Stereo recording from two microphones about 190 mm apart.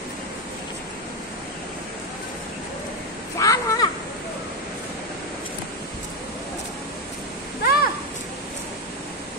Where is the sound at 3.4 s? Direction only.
20° left (ahead or behind).